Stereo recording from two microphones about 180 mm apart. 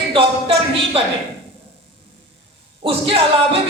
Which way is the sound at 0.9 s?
30° right (ahead or behind).